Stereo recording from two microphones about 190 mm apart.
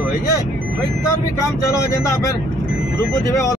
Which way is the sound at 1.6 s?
15° left (ahead or behind).